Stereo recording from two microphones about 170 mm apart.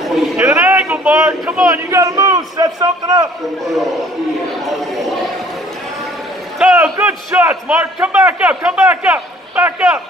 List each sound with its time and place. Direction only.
0.4 s a sound: 15° right (ahead or behind)
1.7 s a man's voice: 15° right (ahead or behind)
4.6 s speech: centre (ahead or behind)
6.6 s a man's voice: 10° right (ahead or behind)